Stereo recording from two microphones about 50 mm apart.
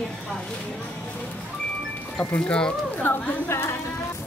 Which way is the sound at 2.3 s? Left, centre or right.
Left.